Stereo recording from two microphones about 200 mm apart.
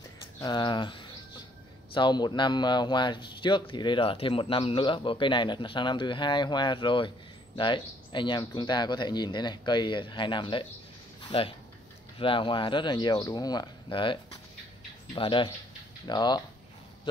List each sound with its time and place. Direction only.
0.4 s a man's voice: 20° left (ahead or behind)